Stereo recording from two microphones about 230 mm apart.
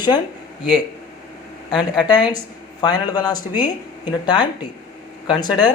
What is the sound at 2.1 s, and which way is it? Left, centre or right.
Speech, centre.